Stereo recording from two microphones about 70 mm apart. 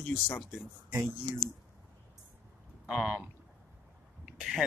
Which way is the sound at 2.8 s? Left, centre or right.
Centre.